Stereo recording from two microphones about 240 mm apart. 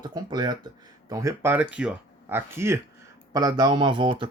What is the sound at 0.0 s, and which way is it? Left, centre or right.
Speech, centre.